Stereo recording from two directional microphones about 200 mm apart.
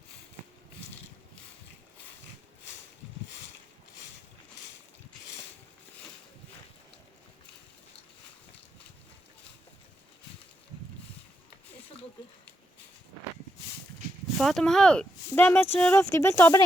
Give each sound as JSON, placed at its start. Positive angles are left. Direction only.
{"t": 14.3, "sound": "speech", "side_deg": 0}